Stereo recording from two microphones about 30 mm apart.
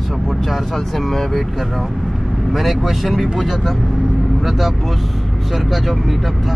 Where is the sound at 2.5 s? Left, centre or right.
Centre.